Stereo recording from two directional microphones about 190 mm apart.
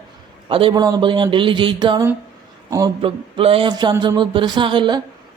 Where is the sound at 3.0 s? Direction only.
30° right (ahead or behind).